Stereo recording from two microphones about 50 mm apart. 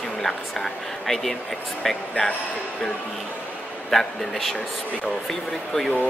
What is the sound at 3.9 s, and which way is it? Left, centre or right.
Speech, centre.